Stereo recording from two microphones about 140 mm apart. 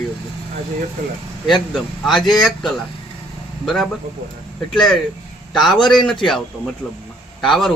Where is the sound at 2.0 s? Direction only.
Centre (ahead or behind).